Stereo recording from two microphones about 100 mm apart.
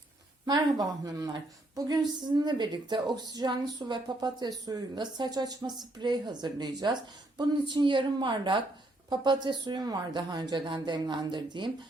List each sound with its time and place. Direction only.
0.4 s a woman's voice: 40° right (ahead or behind)